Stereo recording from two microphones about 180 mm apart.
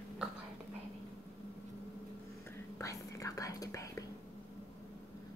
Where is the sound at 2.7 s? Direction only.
15° left (ahead or behind).